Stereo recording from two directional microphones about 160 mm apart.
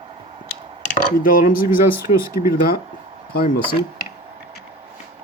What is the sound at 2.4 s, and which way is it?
Speech, 45° left (ahead or behind).